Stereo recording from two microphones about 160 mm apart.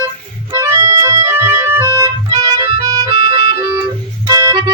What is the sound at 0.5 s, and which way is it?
Organ, 20° right (ahead or behind).